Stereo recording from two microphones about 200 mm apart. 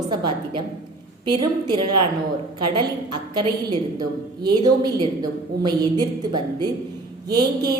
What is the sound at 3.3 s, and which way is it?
A man's voice, 20° right (ahead or behind).